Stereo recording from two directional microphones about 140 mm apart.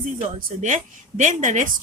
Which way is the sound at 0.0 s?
70° right (ahead or behind).